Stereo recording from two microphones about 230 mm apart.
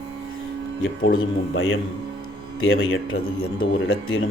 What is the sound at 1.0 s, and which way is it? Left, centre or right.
Speech, left.